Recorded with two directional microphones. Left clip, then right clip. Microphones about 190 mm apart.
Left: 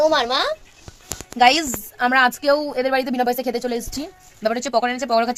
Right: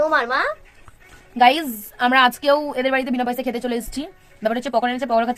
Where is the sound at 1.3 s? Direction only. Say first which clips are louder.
Even; 10° left (ahead or behind).